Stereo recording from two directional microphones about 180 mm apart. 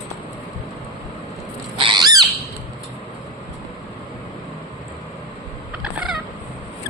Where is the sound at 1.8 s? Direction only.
25° right (ahead or behind).